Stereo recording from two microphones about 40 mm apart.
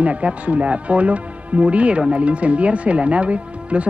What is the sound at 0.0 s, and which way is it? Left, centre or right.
Speech, right.